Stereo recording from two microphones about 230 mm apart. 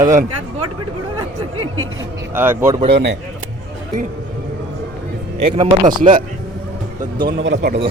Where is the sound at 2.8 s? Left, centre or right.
Right.